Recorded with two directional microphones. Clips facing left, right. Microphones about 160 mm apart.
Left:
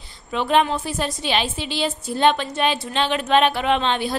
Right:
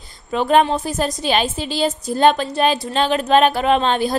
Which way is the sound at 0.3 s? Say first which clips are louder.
Right 4 dB; 40° right (ahead or behind).